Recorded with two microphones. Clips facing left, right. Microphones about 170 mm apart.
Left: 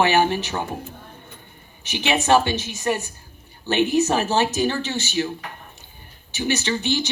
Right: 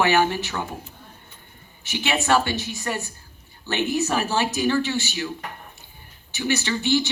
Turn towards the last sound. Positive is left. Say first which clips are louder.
# right 1 dB
turn(degrees=20)  # may be behind; listen again after turning